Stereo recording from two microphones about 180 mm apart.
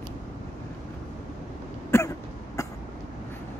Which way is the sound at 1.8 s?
15° left (ahead or behind).